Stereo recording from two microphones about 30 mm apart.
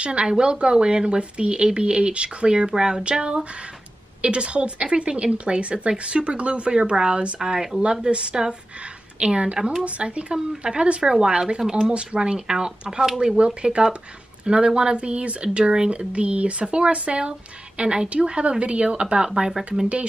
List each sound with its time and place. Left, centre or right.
0.0 s speech: right
16.1 s speech: right
18.1 s speech: right
19.5 s speech: centre